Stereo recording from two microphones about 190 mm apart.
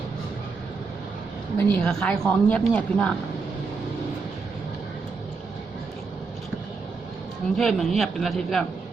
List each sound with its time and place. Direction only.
1.5 s speech: 5° left (ahead or behind)
7.5 s speech: centre (ahead or behind)